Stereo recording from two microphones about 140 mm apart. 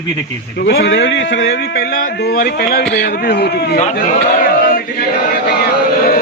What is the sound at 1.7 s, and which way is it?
Speech, 90° left.